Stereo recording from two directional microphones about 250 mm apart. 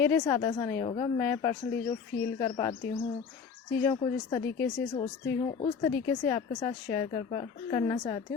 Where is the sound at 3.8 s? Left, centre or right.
Centre.